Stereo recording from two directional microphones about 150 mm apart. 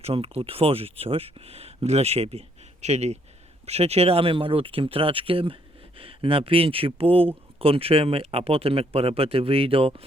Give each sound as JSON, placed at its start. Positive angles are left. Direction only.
{"t": 0.0, "sound": "speech", "side_deg": -40}